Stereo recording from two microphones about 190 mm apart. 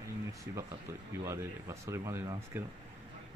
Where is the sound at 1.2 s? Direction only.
15° right (ahead or behind).